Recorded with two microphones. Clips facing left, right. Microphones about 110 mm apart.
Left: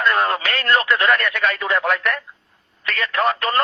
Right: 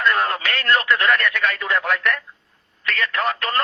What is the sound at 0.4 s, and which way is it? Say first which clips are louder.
Speech: left 1 dB; 45° left (ahead or behind).